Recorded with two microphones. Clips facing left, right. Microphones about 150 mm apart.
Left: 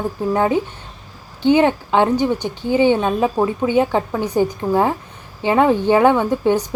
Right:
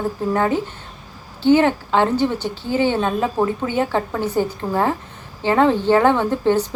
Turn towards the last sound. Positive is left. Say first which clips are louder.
# left 1 dB
turn(degrees=15)  # may be behind; listen again after turning